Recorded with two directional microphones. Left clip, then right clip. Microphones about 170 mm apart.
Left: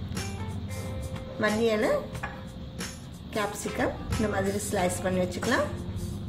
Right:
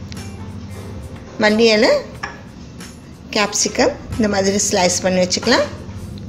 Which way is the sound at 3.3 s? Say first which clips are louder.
Right 13 dB; 30° right (ahead or behind).